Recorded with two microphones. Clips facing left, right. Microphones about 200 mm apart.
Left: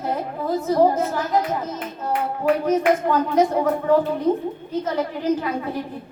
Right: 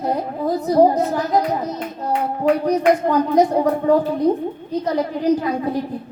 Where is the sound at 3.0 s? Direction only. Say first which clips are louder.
Right 3 dB; 35° right (ahead or behind).